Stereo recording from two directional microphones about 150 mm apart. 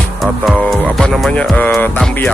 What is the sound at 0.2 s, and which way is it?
Music, centre (ahead or behind).